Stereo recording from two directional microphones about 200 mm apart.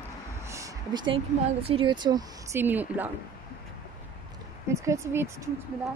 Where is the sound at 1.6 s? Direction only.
25° right (ahead or behind); by 3.1 s 10° right (ahead or behind).